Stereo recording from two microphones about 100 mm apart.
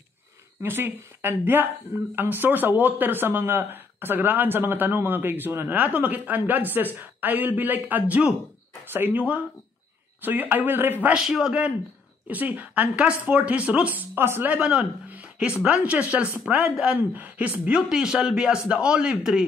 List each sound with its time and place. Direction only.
0.6 s speech: 25° right (ahead or behind)
11.2 s speech: 5° right (ahead or behind)